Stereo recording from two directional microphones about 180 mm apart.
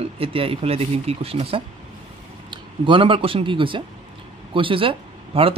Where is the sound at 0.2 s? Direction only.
30° right (ahead or behind).